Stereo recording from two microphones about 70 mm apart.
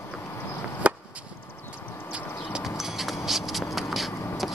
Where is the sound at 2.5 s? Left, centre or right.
Centre.